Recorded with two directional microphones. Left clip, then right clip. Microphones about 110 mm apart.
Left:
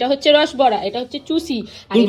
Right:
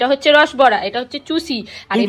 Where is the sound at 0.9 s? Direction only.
50° right (ahead or behind).